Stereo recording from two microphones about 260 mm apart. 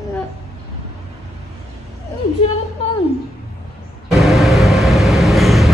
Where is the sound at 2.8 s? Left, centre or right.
Left.